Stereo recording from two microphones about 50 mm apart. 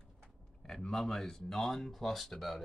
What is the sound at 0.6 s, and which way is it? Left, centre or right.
Speech, centre.